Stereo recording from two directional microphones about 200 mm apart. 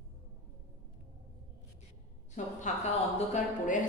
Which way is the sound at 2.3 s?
35° left (ahead or behind).